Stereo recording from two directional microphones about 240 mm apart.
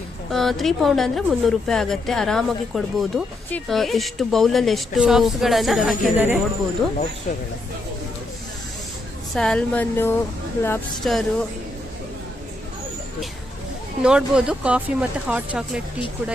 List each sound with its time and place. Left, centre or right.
0.3 s speech: centre
7.3 s speech: left
9.3 s speech: centre
14.0 s speech: centre